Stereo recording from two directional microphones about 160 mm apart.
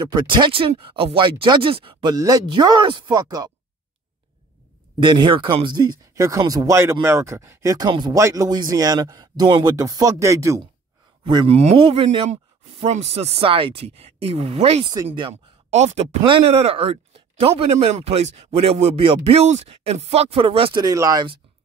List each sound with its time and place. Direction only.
0.0 s speech: 30° right (ahead or behind)
5.0 s speech: 30° right (ahead or behind)
11.2 s speech: 30° right (ahead or behind)